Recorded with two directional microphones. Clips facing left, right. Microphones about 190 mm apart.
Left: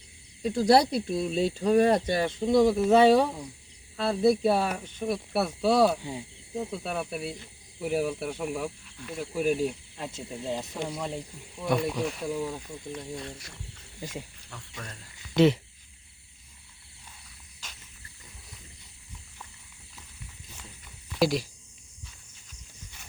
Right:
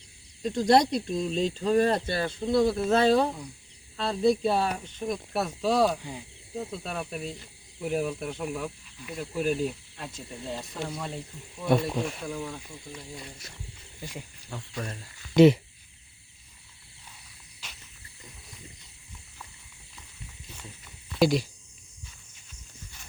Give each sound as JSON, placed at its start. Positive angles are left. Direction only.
{"t": 0.4, "sound": "speech", "side_deg": 5}
{"t": 6.0, "sound": "speech", "side_deg": 25}
{"t": 6.6, "sound": "speech", "side_deg": 10}
{"t": 10.0, "sound": "speech", "side_deg": 25}
{"t": 12.2, "sound": "speech", "side_deg": 15}
{"t": 12.9, "sound": "speech", "side_deg": -5}
{"t": 14.8, "sound": "speech", "side_deg": -30}
{"t": 15.4, "sound": "speech", "side_deg": -10}
{"t": 21.2, "sound": "speech", "side_deg": 0}